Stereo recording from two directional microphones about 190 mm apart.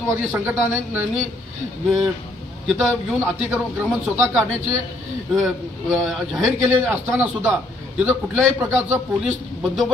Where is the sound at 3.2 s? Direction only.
10° right (ahead or behind).